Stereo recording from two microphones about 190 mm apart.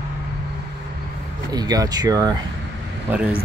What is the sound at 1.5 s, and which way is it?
Speech, 20° right (ahead or behind).